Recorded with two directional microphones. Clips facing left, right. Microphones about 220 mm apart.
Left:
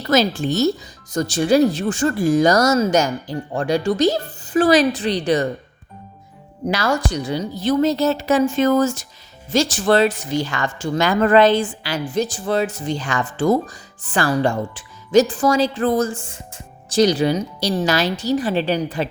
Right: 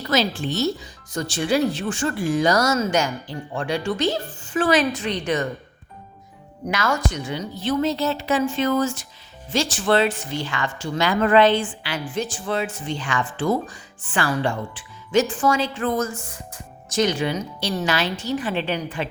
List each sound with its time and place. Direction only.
0.1 s speech: 45° left (ahead or behind)
6.7 s speech: 35° left (ahead or behind)